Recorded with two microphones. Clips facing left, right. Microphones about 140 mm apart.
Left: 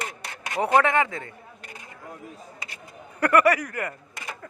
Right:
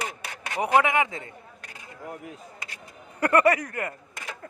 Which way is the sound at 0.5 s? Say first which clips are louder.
Left 1 dB; 15° right (ahead or behind).